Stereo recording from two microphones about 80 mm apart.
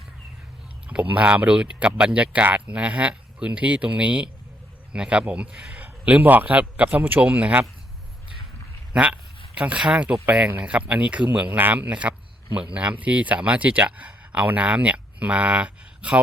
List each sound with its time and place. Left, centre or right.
0.9 s speech: centre
8.9 s speech: centre